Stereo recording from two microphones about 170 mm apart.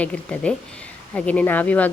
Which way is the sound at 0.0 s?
5° left (ahead or behind).